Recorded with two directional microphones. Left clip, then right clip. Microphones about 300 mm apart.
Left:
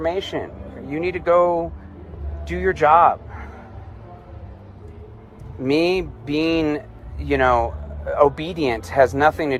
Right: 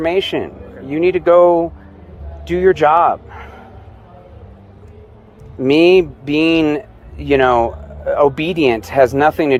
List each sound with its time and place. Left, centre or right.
0.0 s a man's voice: right
5.6 s speech: right